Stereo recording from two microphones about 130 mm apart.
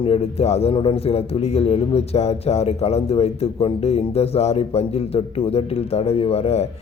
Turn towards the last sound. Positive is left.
turn(degrees=50)  # may be behind; listen again after turning